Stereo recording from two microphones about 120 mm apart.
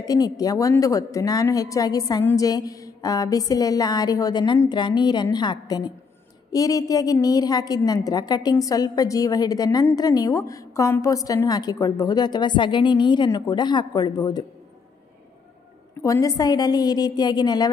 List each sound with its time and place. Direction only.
0.0 s a woman's voice: 30° left (ahead or behind)
16.0 s a woman's voice: 25° left (ahead or behind)